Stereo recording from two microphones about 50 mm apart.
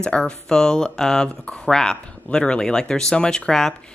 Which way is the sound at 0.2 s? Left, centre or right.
Centre.